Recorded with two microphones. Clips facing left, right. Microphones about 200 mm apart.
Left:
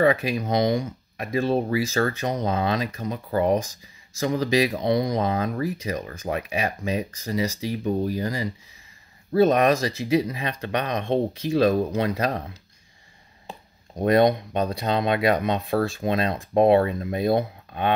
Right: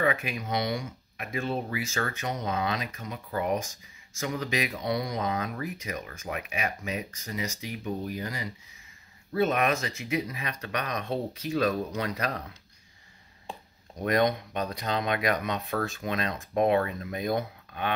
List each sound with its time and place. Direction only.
0.0 s speech: 35° left (ahead or behind)
14.0 s speech: 30° left (ahead or behind)